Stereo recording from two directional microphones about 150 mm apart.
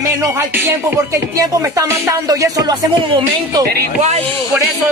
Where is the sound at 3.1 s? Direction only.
35° right (ahead or behind).